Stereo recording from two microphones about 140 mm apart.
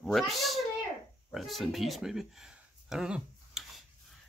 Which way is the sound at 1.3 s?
Centre (ahead or behind).